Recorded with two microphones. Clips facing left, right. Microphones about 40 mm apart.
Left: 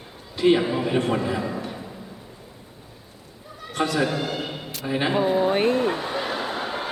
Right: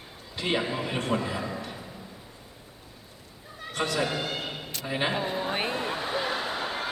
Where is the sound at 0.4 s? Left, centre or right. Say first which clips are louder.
Left 9 dB; centre.